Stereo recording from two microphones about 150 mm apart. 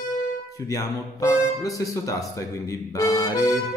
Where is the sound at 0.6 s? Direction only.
20° left (ahead or behind).